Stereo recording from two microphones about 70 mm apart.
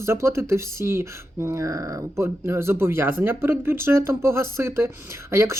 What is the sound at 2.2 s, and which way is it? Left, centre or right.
Speech, right.